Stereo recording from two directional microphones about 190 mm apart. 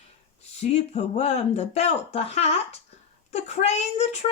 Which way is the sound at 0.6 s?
35° left (ahead or behind).